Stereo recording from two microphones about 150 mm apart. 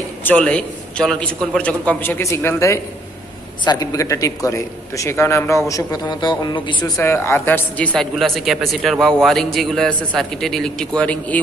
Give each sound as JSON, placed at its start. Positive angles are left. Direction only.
{"t": 0.2, "sound": "a man's voice", "side_deg": 10}
{"t": 6.8, "sound": "speech", "side_deg": 15}